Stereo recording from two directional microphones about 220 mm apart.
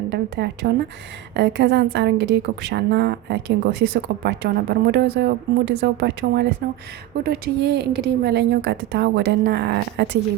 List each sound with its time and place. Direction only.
0.1 s a woman's voice: 50° right (ahead or behind)